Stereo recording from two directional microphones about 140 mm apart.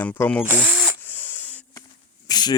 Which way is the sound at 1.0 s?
15° left (ahead or behind).